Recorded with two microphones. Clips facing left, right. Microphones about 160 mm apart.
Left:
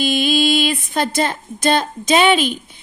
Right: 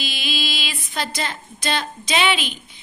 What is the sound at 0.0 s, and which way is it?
Speech, 50° left (ahead or behind).